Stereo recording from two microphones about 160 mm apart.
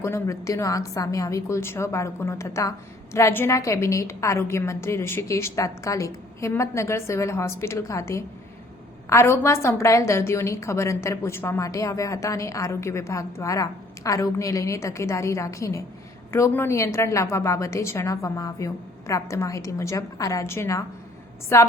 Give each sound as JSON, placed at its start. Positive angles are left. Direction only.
{"t": 0.0, "sound": "a woman's voice", "side_deg": 20}